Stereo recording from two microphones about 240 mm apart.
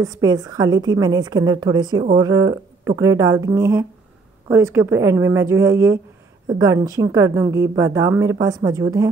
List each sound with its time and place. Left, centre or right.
0.0 s a woman's voice: centre